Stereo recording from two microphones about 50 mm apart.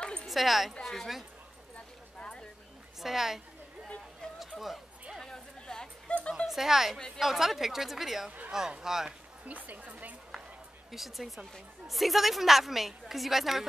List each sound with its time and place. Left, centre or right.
0.0 s a sound: centre
0.3 s a woman's voice: centre
2.1 s a sound: centre
3.0 s a woman's voice: centre
4.6 s speech: centre
5.2 s a sound: centre
6.3 s a woman's voice: centre
9.5 s a woman's voice: right
10.9 s a woman's voice: centre